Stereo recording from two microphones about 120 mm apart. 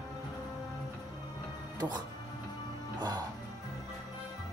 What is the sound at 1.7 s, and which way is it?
Speech, 35° right (ahead or behind).